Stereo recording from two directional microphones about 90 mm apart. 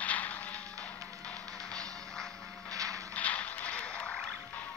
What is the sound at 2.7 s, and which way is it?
Mechanisms, 40° right (ahead or behind).